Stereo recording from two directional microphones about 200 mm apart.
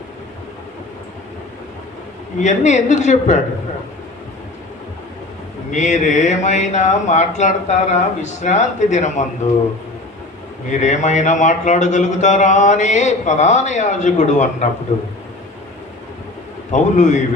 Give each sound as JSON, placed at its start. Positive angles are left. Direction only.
{"t": 2.4, "sound": "a man's voice", "side_deg": 35}
{"t": 5.7, "sound": "a man's voice", "side_deg": 35}
{"t": 10.7, "sound": "a man's voice", "side_deg": 35}
{"t": 16.7, "sound": "a man's voice", "side_deg": 35}